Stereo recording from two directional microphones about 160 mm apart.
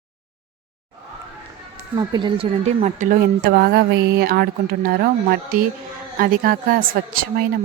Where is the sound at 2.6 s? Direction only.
50° right (ahead or behind).